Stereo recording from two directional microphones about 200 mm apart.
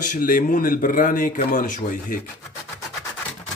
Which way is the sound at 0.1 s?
45° left (ahead or behind).